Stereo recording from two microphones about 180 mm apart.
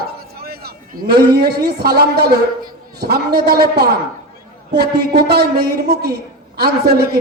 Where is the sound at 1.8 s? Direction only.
65° right (ahead or behind).